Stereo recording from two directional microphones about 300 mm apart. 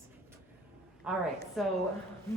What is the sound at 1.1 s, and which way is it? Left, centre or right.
Speech, centre.